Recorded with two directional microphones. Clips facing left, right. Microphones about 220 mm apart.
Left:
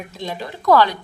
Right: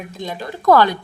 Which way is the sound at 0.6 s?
50° right (ahead or behind).